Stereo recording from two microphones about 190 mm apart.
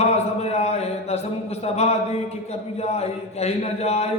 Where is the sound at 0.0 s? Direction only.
35° left (ahead or behind).